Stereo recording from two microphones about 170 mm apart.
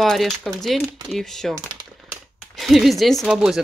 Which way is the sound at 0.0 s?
Centre (ahead or behind).